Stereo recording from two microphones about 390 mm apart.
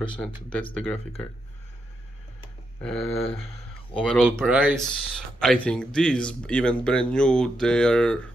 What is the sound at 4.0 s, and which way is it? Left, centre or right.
Speech, centre.